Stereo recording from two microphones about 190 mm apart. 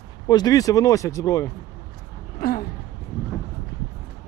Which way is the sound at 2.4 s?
50° left (ahead or behind).